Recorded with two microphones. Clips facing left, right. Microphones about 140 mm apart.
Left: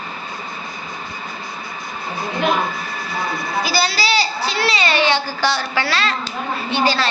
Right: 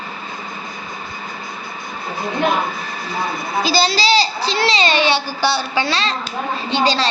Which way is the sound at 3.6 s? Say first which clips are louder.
Right 5 dB; 25° right (ahead or behind).